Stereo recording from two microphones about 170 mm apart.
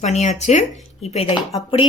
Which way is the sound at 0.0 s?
45° left (ahead or behind).